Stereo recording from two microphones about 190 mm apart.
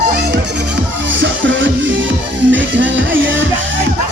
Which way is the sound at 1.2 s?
75° right (ahead or behind).